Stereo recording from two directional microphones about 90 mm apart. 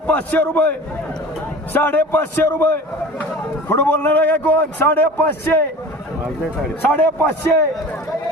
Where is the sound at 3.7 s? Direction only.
20° left (ahead or behind).